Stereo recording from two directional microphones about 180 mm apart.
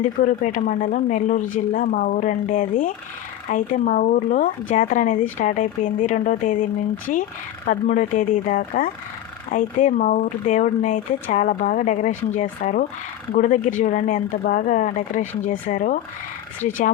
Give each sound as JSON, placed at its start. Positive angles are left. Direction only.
{"t": 0.0, "sound": "speech", "side_deg": 45}
{"t": 7.7, "sound": "speech", "side_deg": 45}